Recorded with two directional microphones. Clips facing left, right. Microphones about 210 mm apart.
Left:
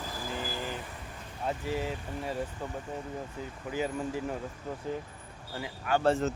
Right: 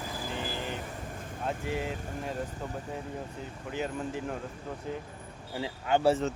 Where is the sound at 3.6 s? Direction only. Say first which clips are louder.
Left 1 dB; 5° left (ahead or behind).